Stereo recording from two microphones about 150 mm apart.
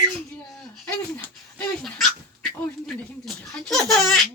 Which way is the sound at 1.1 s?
5° left (ahead or behind).